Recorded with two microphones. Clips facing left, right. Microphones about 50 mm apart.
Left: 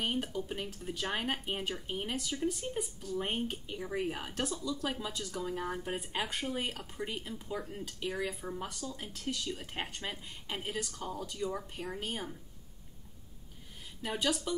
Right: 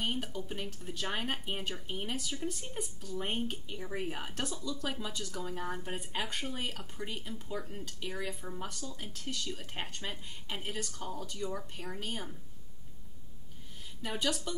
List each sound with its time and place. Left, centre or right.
0.0 s speech: centre
14.0 s speech: centre